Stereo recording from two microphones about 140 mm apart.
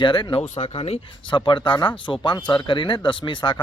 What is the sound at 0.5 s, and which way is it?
Speech, 45° left (ahead or behind).